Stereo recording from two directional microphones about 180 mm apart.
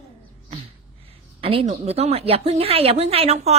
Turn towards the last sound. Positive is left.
turn(degrees=-35)  # may be behind; listen again after turning